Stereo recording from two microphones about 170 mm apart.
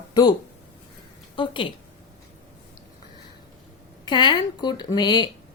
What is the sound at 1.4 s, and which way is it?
Speech, 30° left (ahead or behind).